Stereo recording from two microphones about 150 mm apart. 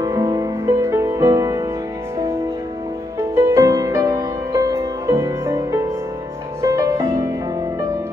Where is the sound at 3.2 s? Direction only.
15° right (ahead or behind).